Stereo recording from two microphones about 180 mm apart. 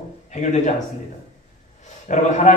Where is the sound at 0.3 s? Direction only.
40° left (ahead or behind).